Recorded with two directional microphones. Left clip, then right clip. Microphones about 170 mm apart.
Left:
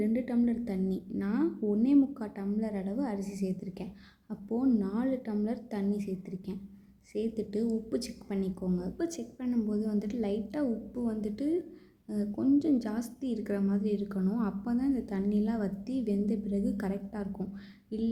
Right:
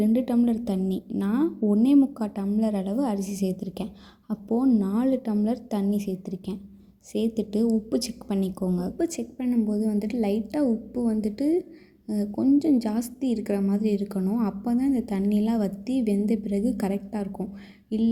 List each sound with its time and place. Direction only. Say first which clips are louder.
0.0 s a woman's voice: right 7 dB; 25° right (ahead or behind)